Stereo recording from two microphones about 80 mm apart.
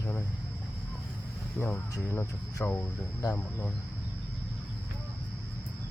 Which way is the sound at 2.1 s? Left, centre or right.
Left.